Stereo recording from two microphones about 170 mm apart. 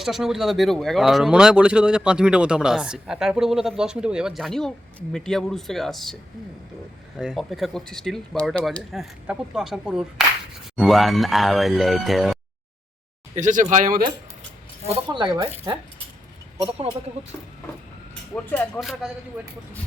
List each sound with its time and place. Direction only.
0.0 s speech: centre (ahead or behind)
7.2 s speech: centre (ahead or behind)
13.3 s speech: 45° right (ahead or behind)
14.8 s speech: 25° right (ahead or behind)
18.8 s speech: centre (ahead or behind)